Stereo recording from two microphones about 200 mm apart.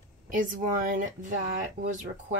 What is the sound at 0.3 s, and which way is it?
Speech, 40° right (ahead or behind).